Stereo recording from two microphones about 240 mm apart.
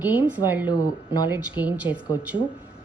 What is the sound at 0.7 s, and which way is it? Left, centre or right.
Speech, centre.